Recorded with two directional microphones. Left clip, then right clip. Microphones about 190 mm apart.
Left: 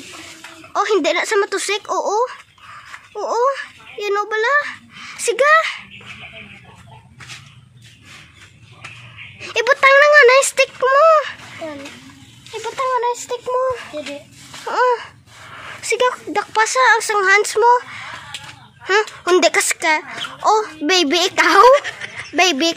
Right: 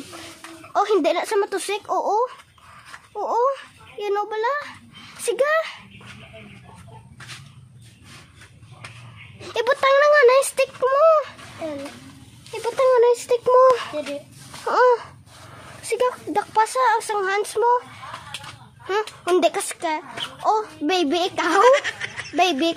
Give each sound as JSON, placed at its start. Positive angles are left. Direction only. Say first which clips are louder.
{"t": 0.7, "sound": "a woman's voice", "louder": "left 3 dB", "side_deg": -5}
{"t": 9.4, "sound": "a woman's voice", "louder": "left 6 dB", "side_deg": -10}
{"t": 12.6, "sound": "child singing", "louder": "right 3 dB", "side_deg": -70}
{"t": 13.6, "sound": "speech", "louder": "right 6 dB", "side_deg": -35}
{"t": 14.7, "sound": "a sound", "louder": "even", "side_deg": -20}
{"t": 15.5, "sound": "a woman's voice", "louder": "left 6 dB", "side_deg": 0}
{"t": 18.9, "sound": "a child's voice", "louder": "left 6 dB", "side_deg": 10}
{"t": 21.6, "sound": "speech", "louder": "left 5 dB", "side_deg": 0}
{"t": 22.4, "sound": "a child's voice", "louder": "left 4 dB", "side_deg": 15}